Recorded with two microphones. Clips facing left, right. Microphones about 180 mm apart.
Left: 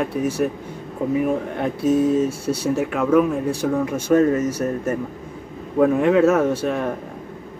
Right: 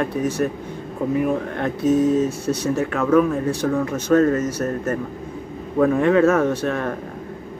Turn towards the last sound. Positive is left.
turn(degrees=10)  # may be behind; listen again after turning